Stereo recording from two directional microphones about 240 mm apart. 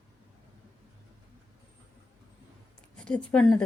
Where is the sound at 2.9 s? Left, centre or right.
Centre.